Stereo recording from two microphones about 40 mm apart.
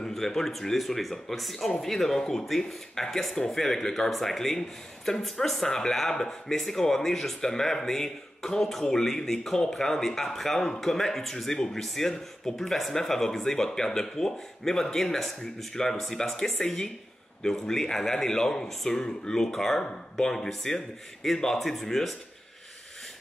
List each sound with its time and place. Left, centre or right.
0.1 s speech: centre